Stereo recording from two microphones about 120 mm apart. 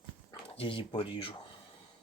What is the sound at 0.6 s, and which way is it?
Speech, 45° left (ahead or behind).